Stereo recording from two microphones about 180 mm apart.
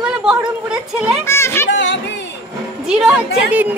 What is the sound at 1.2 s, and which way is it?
Music, 15° left (ahead or behind).